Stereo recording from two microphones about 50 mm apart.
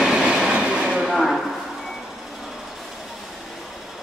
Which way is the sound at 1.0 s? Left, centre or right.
Centre.